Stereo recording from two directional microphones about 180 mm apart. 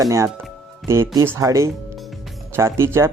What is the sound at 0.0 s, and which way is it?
Speech, 15° right (ahead or behind).